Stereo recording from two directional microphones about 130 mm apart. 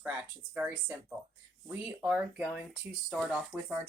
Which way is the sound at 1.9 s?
10° right (ahead or behind).